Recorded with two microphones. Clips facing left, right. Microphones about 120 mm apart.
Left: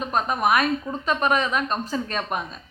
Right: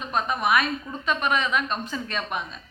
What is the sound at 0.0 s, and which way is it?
A woman's voice, 40° left (ahead or behind).